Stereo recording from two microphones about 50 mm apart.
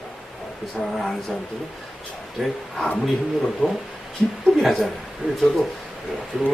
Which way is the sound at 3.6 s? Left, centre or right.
Centre.